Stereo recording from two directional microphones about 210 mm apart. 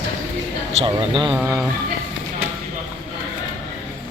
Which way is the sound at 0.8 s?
25° right (ahead or behind).